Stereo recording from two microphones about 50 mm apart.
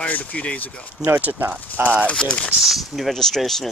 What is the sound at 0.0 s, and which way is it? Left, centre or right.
Speech, left.